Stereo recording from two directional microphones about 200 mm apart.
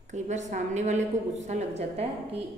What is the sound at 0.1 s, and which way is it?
A woman's voice, 35° right (ahead or behind).